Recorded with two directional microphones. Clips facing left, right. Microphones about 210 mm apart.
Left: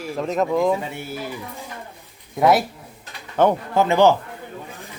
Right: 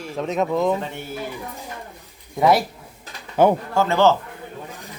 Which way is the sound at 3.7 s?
15° left (ahead or behind).